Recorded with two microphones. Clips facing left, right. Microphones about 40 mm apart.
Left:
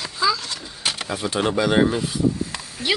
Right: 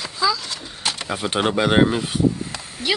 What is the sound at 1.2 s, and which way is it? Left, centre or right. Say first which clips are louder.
Speech: right 1 dB; right.